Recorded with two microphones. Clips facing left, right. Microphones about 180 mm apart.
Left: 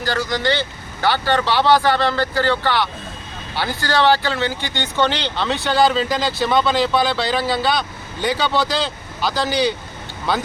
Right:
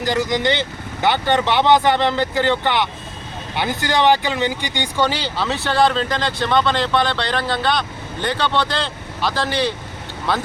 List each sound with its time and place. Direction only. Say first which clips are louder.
0.0 s speech: right 2 dB; 20° right (ahead or behind); by 10.4 s centre (ahead or behind)